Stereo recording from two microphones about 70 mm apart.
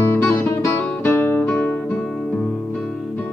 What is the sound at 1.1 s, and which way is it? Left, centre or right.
Music, left.